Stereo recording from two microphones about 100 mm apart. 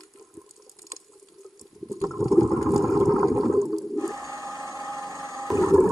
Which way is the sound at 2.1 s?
Centre (ahead or behind).